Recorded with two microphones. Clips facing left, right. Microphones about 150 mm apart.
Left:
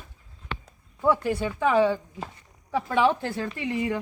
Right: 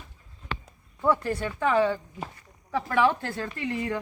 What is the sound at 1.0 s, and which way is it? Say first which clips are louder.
Speech: left 2 dB; 5° left (ahead or behind).